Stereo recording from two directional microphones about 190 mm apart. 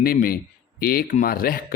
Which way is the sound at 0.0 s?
50° left (ahead or behind).